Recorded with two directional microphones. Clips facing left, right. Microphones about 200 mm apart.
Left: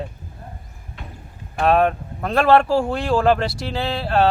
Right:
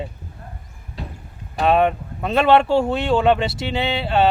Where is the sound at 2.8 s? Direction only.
25° right (ahead or behind).